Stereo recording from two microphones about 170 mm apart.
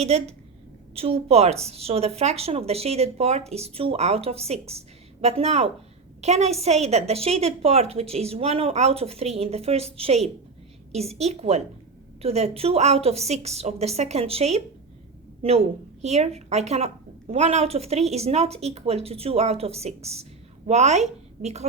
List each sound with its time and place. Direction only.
0.0 s a woman's voice: 40° right (ahead or behind)